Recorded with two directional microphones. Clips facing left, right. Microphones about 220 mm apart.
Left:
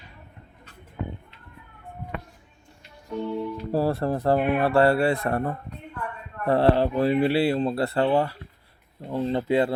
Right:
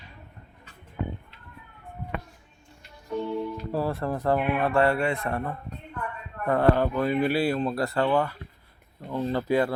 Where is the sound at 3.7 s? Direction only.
35° left (ahead or behind).